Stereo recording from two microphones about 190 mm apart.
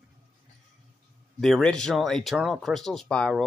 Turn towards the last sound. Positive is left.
turn(degrees=0)  # may be behind; listen again after turning